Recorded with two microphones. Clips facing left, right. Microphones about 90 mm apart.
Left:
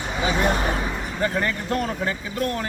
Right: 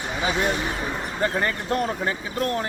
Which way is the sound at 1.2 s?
35° right (ahead or behind).